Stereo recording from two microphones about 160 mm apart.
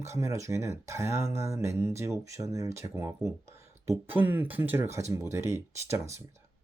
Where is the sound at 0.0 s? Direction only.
20° right (ahead or behind).